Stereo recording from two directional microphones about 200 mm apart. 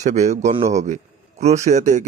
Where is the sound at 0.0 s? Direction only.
35° right (ahead or behind).